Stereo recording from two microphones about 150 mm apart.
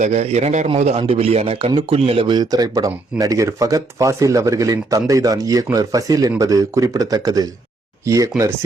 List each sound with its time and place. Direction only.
0.0 s a man's voice: 45° right (ahead or behind); by 8.3 s 20° right (ahead or behind)